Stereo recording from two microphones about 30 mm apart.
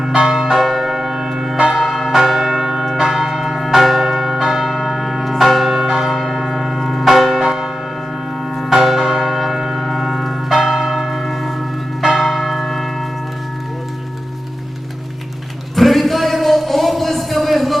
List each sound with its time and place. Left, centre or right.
0.1 s church bell: right
0.5 s church bell: centre
3.0 s church bell: centre
4.5 s church bell: centre
8.9 s church bell: centre
10.6 s church bell: centre
15.7 s a sound: centre